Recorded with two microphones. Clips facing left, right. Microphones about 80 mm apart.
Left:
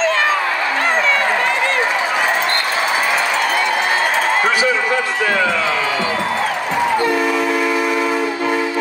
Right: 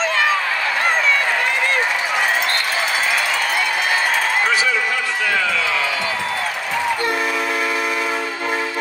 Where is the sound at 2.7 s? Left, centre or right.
Centre.